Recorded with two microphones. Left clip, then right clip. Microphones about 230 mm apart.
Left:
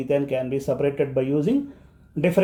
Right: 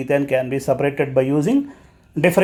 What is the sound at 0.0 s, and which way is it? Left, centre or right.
Speech, right.